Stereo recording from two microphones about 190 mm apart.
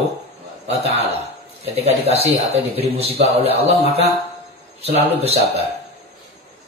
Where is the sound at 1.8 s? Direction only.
35° right (ahead or behind).